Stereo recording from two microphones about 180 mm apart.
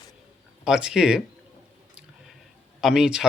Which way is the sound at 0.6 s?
5° right (ahead or behind).